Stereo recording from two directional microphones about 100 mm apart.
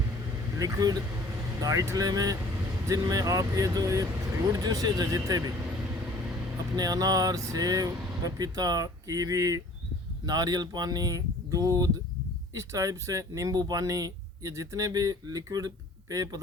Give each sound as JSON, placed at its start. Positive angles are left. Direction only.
{"t": 0.6, "sound": "speech", "side_deg": -35}
{"t": 6.7, "sound": "speech", "side_deg": -40}